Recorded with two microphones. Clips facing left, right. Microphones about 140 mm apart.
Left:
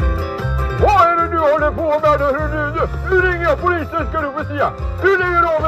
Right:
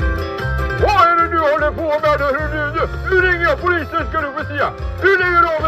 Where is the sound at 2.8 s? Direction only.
80° right.